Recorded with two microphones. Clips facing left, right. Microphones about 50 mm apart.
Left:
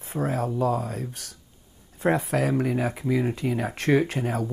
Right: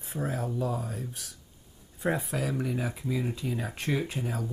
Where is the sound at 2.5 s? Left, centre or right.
Left.